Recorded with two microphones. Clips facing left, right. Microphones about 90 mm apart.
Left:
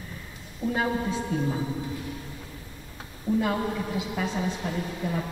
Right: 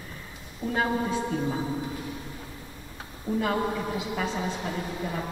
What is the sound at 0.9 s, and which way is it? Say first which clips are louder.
Speech: right 1 dB; 15° right (ahead or behind).